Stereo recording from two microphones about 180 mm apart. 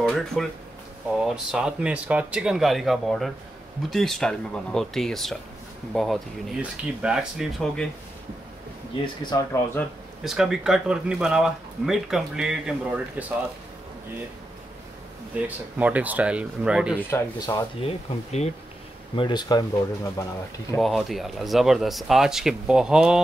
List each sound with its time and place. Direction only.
0.0 s a sound: centre (ahead or behind)
1.2 s speech: 5° right (ahead or behind)
9.0 s speech: 25° left (ahead or behind)
10.2 s speech: 5° right (ahead or behind)
15.3 s speech: 10° right (ahead or behind)
17.1 s speech: 15° left (ahead or behind)
17.8 s speech: 35° left (ahead or behind)
19.1 s speech: 25° left (ahead or behind)
20.7 s speech: centre (ahead or behind)